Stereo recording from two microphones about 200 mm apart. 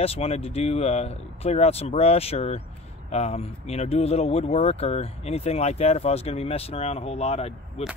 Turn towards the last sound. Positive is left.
turn(degrees=30)  # may be behind; listen again after turning